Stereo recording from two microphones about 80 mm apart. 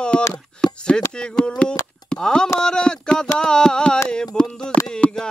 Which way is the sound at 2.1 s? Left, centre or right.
Centre.